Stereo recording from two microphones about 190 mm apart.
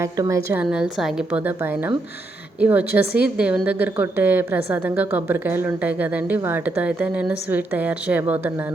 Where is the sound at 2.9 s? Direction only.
55° left (ahead or behind).